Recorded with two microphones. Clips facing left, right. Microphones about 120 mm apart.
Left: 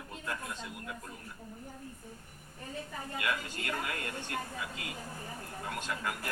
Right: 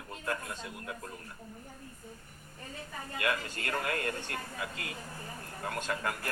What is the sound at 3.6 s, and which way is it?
Speech, 40° right (ahead or behind).